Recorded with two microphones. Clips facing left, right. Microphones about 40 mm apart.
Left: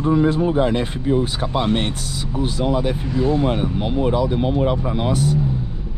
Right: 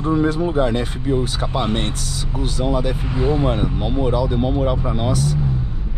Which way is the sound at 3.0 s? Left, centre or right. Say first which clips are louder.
Left 1 dB; right.